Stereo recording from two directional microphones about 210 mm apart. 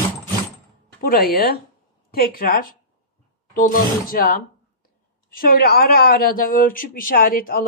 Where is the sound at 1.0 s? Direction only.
45° left (ahead or behind).